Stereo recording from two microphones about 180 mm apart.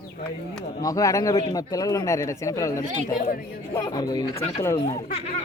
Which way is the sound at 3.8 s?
20° left (ahead or behind).